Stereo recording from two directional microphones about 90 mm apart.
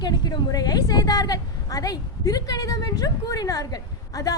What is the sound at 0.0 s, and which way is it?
A woman's voice, 50° left (ahead or behind).